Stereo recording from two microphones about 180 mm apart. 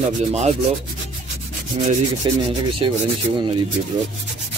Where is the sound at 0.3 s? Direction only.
40° right (ahead or behind).